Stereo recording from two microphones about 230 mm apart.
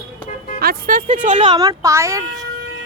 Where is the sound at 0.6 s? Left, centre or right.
Right.